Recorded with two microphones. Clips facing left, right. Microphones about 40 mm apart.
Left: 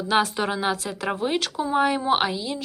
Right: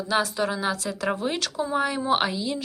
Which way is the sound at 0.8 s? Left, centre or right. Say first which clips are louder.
Even; centre.